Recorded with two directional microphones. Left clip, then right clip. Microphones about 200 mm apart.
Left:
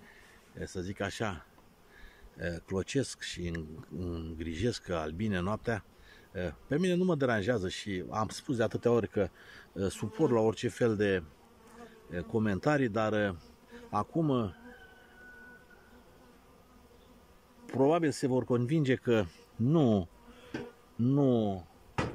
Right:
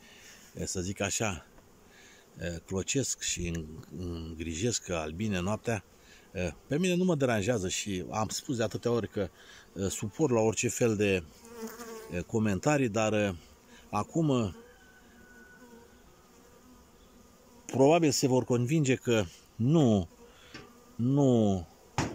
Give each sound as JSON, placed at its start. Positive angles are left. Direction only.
{"t": 0.6, "sound": "speech", "side_deg": -5}
{"t": 17.6, "sound": "speech", "side_deg": -10}
{"t": 20.5, "sound": "insect", "side_deg": 40}
{"t": 21.0, "sound": "insect", "side_deg": 0}